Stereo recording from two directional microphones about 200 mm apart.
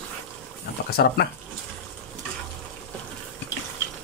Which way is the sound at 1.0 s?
50° left (ahead or behind).